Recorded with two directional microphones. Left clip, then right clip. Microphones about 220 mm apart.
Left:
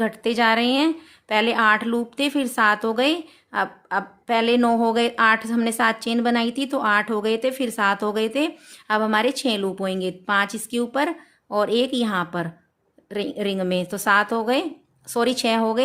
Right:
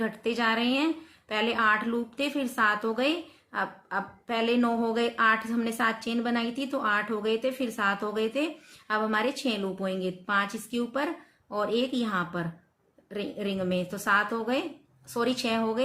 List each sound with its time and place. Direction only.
0.0 s a woman's voice: 55° left (ahead or behind)